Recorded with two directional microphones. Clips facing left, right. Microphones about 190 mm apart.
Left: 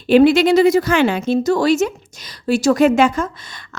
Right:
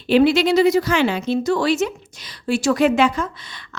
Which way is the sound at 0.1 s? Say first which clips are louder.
Left 4 dB; 50° left (ahead or behind).